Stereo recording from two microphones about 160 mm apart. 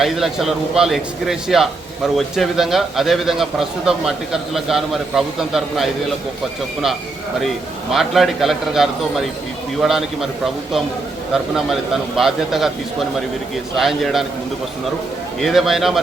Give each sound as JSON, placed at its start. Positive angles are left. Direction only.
{"t": 0.0, "sound": "a man's voice", "side_deg": 0}
{"t": 7.9, "sound": "a man's voice", "side_deg": 0}
{"t": 15.4, "sound": "a man's voice", "side_deg": 0}